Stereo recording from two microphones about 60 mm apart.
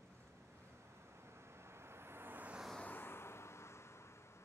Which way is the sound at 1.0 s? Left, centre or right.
Right.